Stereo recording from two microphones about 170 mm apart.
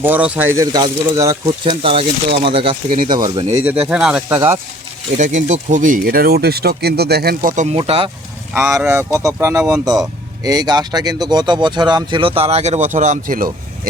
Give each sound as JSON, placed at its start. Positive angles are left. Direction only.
{"t": 0.0, "sound": "speech", "side_deg": -10}
{"t": 1.6, "sound": "speech", "side_deg": -30}
{"t": 3.5, "sound": "speech", "side_deg": -10}
{"t": 5.1, "sound": "speech", "side_deg": -45}
{"t": 7.5, "sound": "speech", "side_deg": -45}
{"t": 7.8, "sound": "speech", "side_deg": -30}
{"t": 9.1, "sound": "speech", "side_deg": -20}